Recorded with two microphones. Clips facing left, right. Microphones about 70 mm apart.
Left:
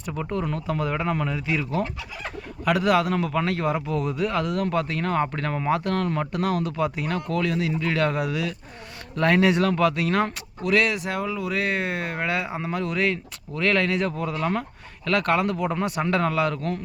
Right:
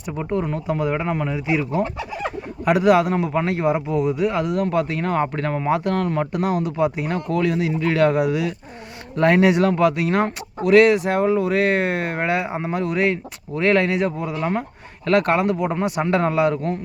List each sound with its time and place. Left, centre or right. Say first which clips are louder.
0.0 s speech: right 4 dB; centre
1.8 s speech: right 6 dB; right
2.6 s speech: right 5 dB; centre